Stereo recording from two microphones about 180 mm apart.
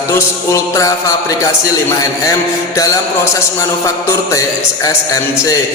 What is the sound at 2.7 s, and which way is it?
A man's voice, 20° left (ahead or behind).